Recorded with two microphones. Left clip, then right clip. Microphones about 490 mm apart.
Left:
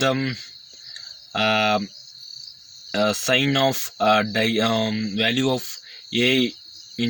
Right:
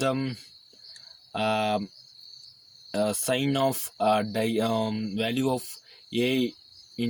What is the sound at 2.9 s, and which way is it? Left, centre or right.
Speech, right.